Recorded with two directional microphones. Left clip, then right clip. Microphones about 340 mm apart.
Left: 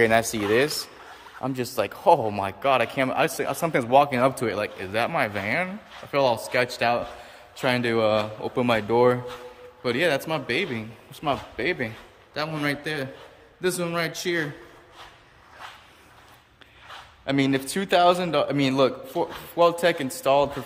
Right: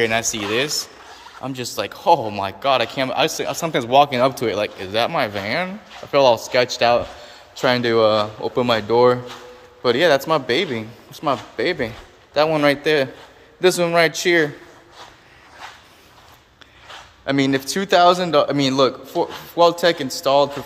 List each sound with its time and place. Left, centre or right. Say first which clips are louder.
0.0 s a man's voice: right 1 dB; centre
17.2 s a man's voice: right 5 dB; centre